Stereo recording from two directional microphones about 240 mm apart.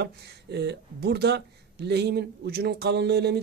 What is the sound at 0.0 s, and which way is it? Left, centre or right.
Speech, right.